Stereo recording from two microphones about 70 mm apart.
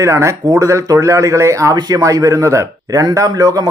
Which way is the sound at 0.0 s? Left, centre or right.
Right.